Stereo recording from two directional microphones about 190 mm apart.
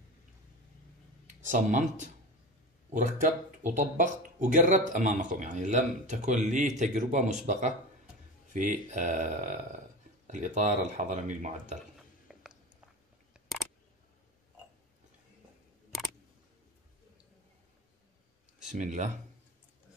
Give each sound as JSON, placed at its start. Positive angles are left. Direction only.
{"t": 1.4, "sound": "speech", "side_deg": -40}
{"t": 12.3, "sound": "a sound", "side_deg": 0}
{"t": 18.7, "sound": "speech", "side_deg": -40}